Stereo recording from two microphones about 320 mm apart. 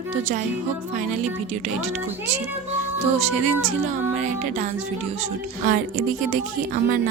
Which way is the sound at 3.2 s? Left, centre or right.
Centre.